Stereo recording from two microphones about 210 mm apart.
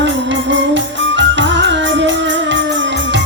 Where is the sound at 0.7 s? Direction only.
60° right (ahead or behind).